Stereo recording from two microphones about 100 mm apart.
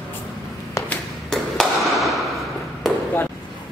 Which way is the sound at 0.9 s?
5° left (ahead or behind).